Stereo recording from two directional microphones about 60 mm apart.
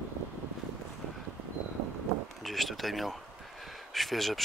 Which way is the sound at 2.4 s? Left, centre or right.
Centre.